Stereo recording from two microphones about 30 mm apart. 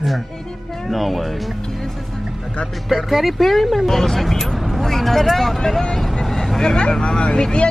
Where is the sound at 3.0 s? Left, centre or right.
Centre.